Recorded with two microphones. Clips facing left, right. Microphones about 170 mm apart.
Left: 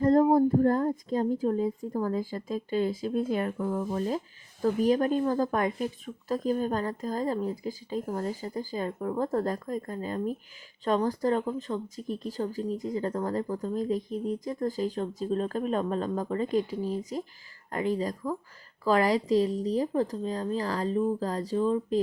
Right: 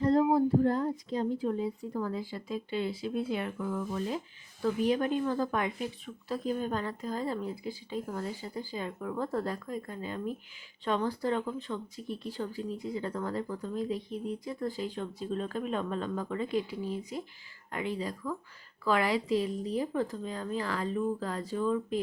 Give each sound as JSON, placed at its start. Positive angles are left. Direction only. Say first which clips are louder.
{"t": 0.0, "sound": "speech", "louder": "left 4 dB", "side_deg": 45}